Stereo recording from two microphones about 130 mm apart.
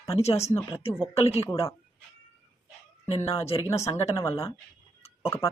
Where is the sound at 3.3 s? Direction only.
50° left (ahead or behind).